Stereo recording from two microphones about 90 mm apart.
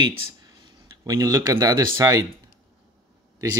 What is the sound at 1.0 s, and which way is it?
Speech, 40° right (ahead or behind).